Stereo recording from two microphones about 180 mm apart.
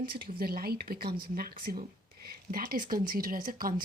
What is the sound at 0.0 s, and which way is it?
Speech, 55° right (ahead or behind).